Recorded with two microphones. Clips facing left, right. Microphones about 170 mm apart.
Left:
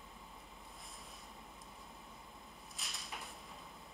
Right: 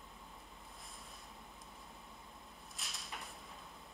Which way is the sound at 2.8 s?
Centre (ahead or behind).